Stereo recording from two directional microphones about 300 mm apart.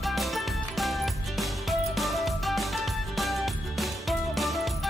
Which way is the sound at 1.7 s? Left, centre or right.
Centre.